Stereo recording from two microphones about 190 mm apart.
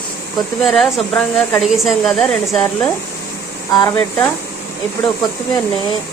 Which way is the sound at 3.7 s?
20° left (ahead or behind).